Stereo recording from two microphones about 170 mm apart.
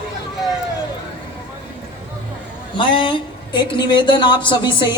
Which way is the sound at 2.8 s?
30° left (ahead or behind).